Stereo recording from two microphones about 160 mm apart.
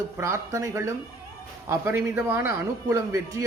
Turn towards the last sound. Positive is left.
turn(degrees=-20)  # may be behind; listen again after turning